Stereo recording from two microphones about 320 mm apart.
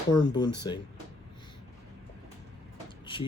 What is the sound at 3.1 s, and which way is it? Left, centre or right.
Speech, centre.